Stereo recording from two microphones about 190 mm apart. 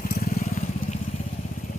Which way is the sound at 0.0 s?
50° left (ahead or behind).